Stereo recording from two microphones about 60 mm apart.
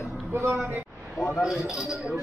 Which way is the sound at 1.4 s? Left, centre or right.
Centre.